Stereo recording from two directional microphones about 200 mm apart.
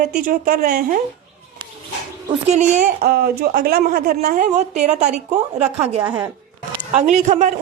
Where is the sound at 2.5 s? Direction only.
40° right (ahead or behind).